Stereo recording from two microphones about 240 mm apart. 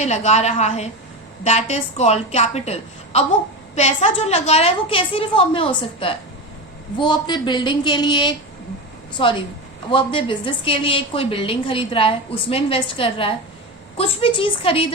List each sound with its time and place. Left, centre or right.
0.0 s a woman's voice: left
9.9 s a woman's voice: left